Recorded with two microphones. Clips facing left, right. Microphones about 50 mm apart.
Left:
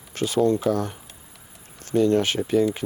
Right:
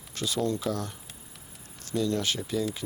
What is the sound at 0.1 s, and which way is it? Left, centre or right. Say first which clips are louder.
Speech: left 8 dB; left.